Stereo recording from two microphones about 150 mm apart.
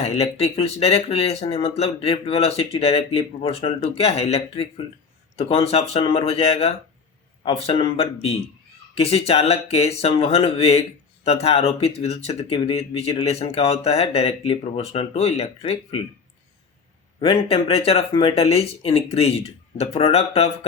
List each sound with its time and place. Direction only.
0.0 s speech: 45° left (ahead or behind)
17.2 s speech: 40° left (ahead or behind)